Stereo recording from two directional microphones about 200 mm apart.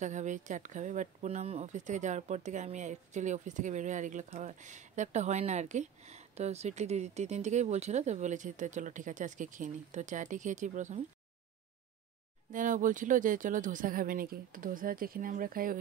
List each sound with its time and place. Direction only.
0.0 s speech: 35° right (ahead or behind)
12.5 s speech: 40° right (ahead or behind)